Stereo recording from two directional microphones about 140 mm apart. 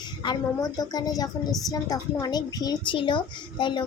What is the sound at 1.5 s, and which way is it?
Speech, centre (ahead or behind).